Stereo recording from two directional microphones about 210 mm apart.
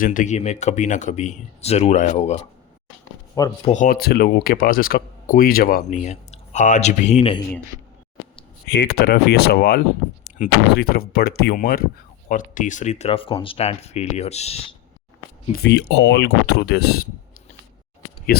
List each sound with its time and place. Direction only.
0.0 s speech: 40° left (ahead or behind)
3.4 s speech: 15° left (ahead or behind)
3.7 s speech: 40° left (ahead or behind)
8.6 s speech: 55° left (ahead or behind); by 14.6 s 30° left (ahead or behind)
15.6 s speech: 55° left (ahead or behind)